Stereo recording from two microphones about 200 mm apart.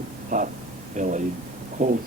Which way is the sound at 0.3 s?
40° right (ahead or behind).